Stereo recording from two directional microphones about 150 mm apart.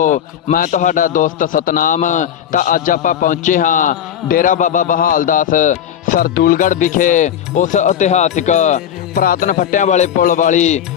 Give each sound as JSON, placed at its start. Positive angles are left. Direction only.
{"t": 0.0, "sound": "a man's voice", "side_deg": 55}
{"t": 9.1, "sound": "music", "side_deg": 70}
{"t": 10.2, "sound": "a man's voice", "side_deg": 60}